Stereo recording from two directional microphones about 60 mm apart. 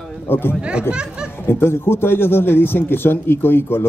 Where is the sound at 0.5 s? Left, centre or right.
Centre.